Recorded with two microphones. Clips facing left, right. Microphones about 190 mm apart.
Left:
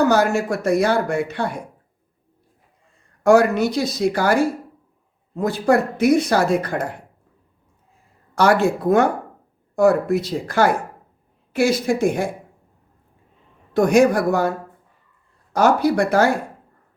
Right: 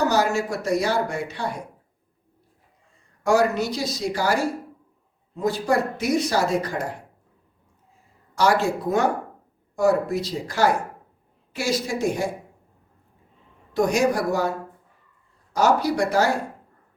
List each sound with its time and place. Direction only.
0.0 s speech: 55° left (ahead or behind)
3.2 s speech: 55° left (ahead or behind)
8.4 s speech: 60° left (ahead or behind)
13.7 s speech: 55° left (ahead or behind)
15.5 s speech: 55° left (ahead or behind)